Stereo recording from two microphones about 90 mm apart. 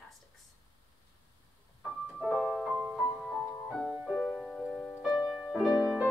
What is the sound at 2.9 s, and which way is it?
Music, 5° left (ahead or behind).